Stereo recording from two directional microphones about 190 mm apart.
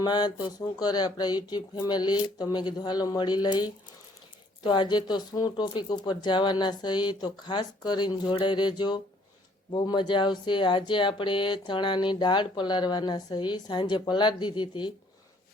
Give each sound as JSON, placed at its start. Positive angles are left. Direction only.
{"t": 0.0, "sound": "speech", "side_deg": 20}